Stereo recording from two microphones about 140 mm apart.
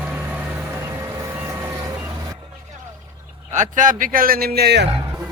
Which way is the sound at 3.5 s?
65° right (ahead or behind).